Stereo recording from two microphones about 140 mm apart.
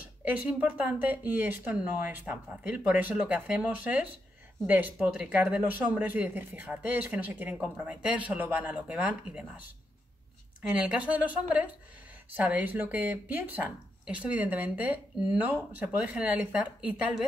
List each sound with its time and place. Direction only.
0.2 s speech: 10° right (ahead or behind)
10.7 s speech: 5° right (ahead or behind)